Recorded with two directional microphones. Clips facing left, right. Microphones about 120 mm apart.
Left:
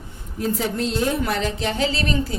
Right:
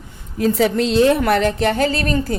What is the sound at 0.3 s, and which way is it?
A woman's voice, 85° right.